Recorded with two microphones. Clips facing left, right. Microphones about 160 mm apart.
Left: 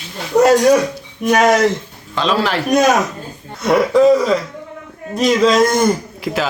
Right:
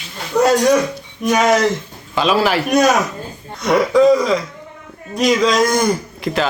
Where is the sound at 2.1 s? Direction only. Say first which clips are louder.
Right 2 dB; 10° right (ahead or behind).